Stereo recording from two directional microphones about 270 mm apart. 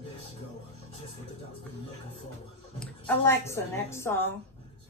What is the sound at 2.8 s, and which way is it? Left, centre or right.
A woman's voice, centre.